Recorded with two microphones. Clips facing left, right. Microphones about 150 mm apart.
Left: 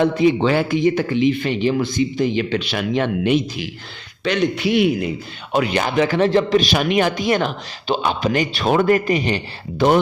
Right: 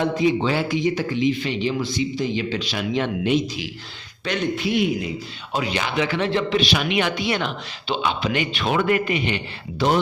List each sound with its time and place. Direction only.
0.0 s speech: 60° left (ahead or behind)
4.2 s a man's voice: 85° left; by 9.8 s 40° left (ahead or behind)